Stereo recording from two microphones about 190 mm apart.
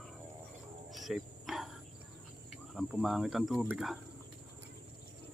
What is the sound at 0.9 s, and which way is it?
Cricket, centre (ahead or behind).